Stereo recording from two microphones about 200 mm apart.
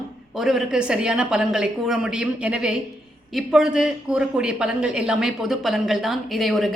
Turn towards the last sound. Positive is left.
turn(degrees=0)  # may be behind; listen again after turning